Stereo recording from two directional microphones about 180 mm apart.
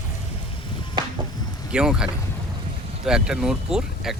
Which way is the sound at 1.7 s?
5° right (ahead or behind).